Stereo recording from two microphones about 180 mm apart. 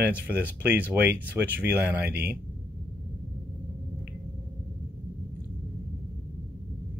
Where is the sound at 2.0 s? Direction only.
60° right (ahead or behind).